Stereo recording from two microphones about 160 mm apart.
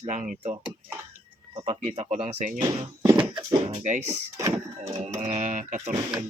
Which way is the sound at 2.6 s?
20° right (ahead or behind).